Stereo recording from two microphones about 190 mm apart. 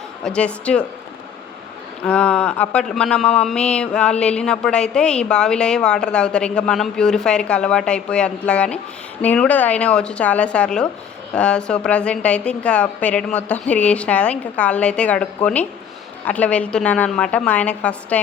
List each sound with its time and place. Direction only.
0.3 s speech: 5° left (ahead or behind)
2.0 s a woman's voice: 5° left (ahead or behind)